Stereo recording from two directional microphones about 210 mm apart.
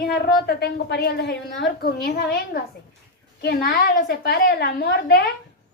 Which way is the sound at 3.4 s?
45° left (ahead or behind).